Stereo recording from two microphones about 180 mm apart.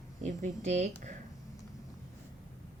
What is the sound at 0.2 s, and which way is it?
Speech, 40° right (ahead or behind).